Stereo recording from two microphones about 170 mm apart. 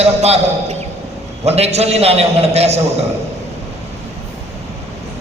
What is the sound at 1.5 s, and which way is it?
A man's voice, 40° right (ahead or behind).